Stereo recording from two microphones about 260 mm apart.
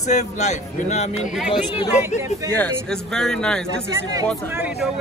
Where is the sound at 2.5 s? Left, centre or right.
Centre.